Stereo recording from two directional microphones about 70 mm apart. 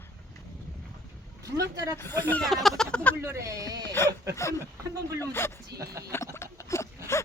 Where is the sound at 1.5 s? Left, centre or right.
Right.